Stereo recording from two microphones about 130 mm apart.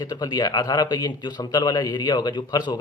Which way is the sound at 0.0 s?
30° left (ahead or behind).